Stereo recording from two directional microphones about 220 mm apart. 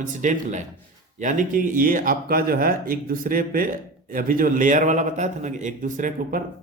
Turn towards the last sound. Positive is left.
turn(degrees=-35)  # may be behind; listen again after turning